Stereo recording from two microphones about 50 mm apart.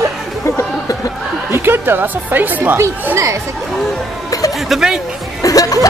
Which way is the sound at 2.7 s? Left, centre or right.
Right.